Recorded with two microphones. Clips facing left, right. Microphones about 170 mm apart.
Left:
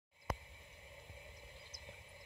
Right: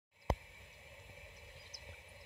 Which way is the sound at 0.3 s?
25° right (ahead or behind).